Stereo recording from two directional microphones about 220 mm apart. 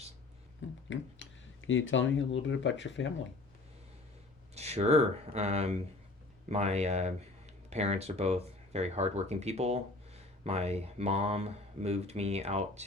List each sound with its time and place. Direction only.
0.9 s speech: 60° left (ahead or behind)
4.5 s speech: 30° right (ahead or behind)